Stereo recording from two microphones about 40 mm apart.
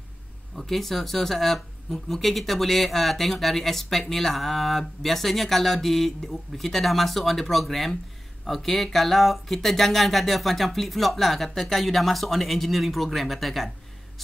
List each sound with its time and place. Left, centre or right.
0.6 s speech: centre